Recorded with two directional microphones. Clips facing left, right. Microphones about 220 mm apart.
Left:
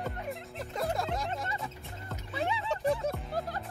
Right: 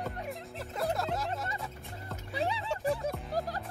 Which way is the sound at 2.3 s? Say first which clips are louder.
Even; 35° right (ahead or behind).